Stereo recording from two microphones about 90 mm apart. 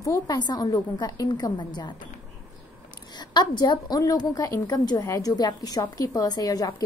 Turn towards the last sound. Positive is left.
turn(degrees=45)  # may be behind; listen again after turning